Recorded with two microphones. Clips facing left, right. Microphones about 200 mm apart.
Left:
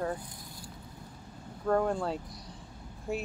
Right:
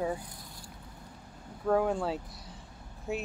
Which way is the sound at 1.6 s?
5° right (ahead or behind).